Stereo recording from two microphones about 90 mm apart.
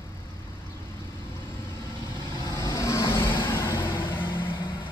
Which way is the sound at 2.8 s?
30° left (ahead or behind).